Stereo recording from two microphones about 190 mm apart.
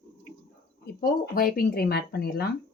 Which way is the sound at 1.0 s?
50° left (ahead or behind).